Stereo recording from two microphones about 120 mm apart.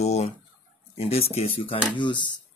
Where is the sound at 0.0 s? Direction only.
65° left (ahead or behind).